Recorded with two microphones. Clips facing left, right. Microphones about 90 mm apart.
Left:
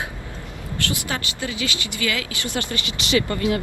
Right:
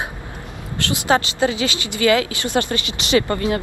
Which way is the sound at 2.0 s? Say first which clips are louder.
Right 10 dB; 35° right (ahead or behind).